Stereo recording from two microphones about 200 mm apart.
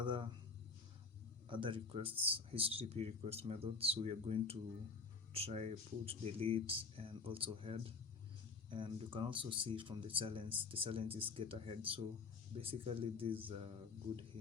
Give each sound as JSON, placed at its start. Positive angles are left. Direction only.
{"t": 0.0, "sound": "speech", "side_deg": -25}
{"t": 1.5, "sound": "speech", "side_deg": -25}